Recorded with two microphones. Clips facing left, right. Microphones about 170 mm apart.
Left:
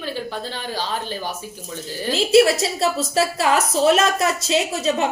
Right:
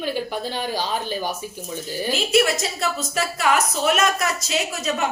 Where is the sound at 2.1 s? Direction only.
30° left (ahead or behind).